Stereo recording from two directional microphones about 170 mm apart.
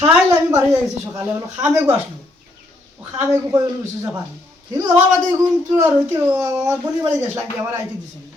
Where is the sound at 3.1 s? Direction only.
20° right (ahead or behind).